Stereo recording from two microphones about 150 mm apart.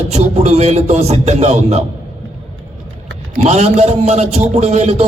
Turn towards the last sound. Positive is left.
turn(degrees=-50)  # may be behind; listen again after turning